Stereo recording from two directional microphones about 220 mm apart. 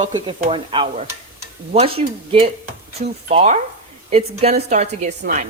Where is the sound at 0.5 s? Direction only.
25° right (ahead or behind).